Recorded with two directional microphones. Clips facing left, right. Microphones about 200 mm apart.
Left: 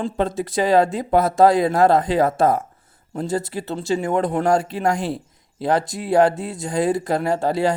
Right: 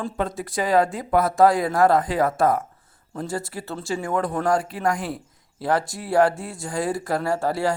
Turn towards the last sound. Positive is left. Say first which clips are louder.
# left 3 dB
turn(degrees=20)  # may be behind; listen again after turning